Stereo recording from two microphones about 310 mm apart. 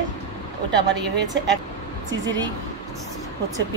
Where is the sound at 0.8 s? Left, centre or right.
Right.